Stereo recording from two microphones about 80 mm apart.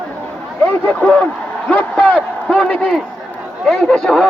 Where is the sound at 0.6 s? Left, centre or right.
Centre.